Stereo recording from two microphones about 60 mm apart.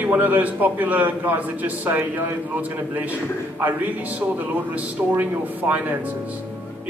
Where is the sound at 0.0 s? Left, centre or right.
Right.